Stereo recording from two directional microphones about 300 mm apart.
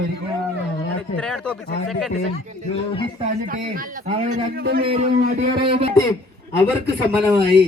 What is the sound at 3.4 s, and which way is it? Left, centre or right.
Speech, right.